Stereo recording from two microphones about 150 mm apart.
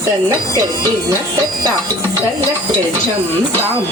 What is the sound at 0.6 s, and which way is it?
Speech, 25° right (ahead or behind).